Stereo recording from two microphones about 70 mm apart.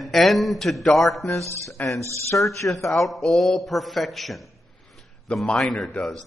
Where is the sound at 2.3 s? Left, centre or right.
Left.